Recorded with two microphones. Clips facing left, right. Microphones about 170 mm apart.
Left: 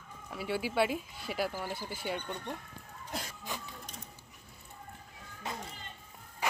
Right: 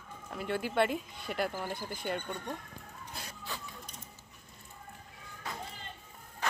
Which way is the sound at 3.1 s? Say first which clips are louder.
Left 8 dB; 90° left.